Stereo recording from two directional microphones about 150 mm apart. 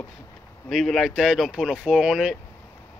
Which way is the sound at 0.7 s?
Centre (ahead or behind).